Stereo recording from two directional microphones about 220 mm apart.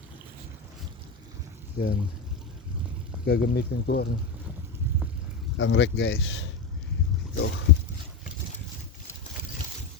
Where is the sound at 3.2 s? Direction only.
50° left (ahead or behind).